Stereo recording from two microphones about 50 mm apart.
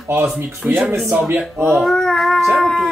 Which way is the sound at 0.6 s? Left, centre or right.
Right.